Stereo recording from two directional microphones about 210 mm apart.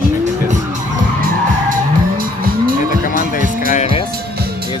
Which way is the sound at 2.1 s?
40° right (ahead or behind).